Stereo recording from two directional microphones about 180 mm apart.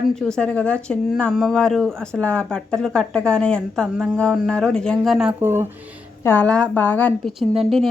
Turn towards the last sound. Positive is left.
turn(degrees=0)  # may be behind; listen again after turning